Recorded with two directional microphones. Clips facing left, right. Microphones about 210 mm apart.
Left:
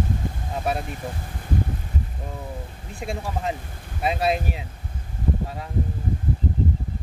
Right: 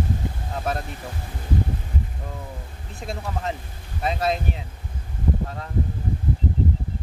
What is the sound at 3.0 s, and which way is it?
Speech, 10° left (ahead or behind).